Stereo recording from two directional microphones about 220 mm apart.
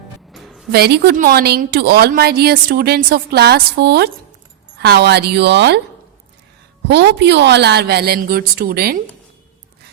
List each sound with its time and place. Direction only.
0.3 s a sound: centre (ahead or behind)
0.7 s a woman's voice: 45° right (ahead or behind)
6.8 s a woman's voice: 50° right (ahead or behind)